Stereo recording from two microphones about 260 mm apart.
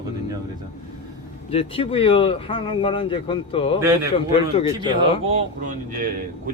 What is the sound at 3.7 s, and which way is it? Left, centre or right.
Speech, centre.